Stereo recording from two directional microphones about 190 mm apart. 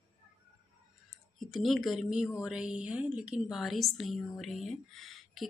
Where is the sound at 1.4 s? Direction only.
Centre (ahead or behind).